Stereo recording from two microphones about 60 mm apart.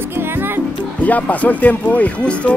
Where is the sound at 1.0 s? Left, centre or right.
Left.